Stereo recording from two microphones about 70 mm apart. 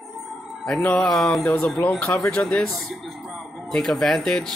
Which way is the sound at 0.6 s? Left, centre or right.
Centre.